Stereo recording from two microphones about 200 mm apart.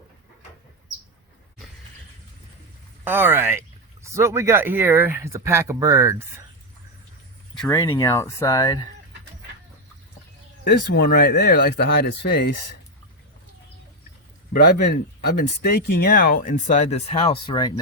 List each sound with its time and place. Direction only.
3.0 s speech: 10° right (ahead or behind)
7.7 s speech: 15° left (ahead or behind)
10.6 s speech: 50° left (ahead or behind)
14.5 s speech: 50° left (ahead or behind); by 17.7 s 20° left (ahead or behind)